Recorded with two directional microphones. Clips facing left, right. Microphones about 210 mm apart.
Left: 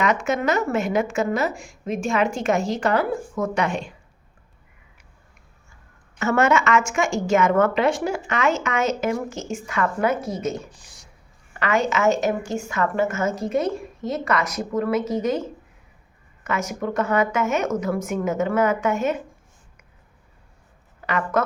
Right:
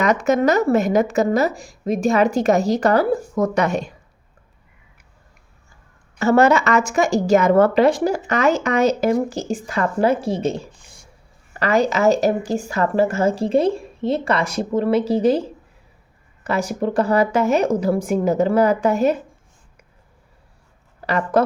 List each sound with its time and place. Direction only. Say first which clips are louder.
0.0 s a woman's voice: right 5 dB; 40° right (ahead or behind)
6.1 s a woman's voice: right 5 dB; 35° right (ahead or behind)
10.8 s a sound: right 2 dB; 75° left (ahead or behind)
11.5 s a woman's voice: right 4 dB; 35° right (ahead or behind)
21.0 s speech: right 5 dB; 35° right (ahead or behind)